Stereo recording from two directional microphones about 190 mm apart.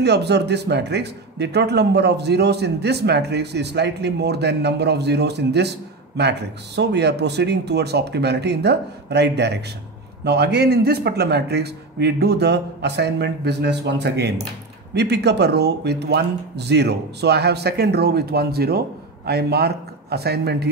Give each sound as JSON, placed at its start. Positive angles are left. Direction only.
{"t": 0.0, "sound": "a man's voice", "side_deg": -60}